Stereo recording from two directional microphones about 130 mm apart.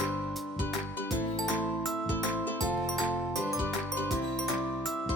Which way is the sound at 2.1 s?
15° left (ahead or behind).